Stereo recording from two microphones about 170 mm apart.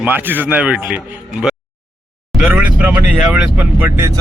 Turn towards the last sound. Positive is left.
turn(degrees=-15)  # may be behind; listen again after turning